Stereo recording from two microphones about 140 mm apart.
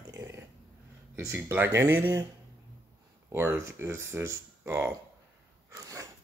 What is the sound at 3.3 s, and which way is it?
Speech, 20° right (ahead or behind).